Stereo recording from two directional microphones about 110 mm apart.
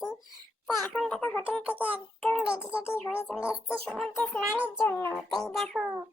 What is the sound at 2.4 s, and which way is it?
A child's voice, 10° right (ahead or behind).